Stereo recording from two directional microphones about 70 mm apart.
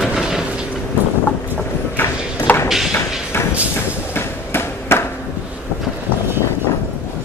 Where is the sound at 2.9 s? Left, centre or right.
Left.